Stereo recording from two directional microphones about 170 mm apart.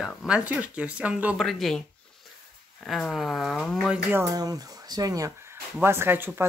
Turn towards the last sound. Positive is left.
turn(degrees=-15)  # may be behind; listen again after turning